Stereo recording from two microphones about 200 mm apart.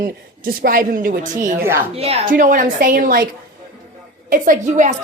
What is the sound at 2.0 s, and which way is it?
Speech, 30° right (ahead or behind).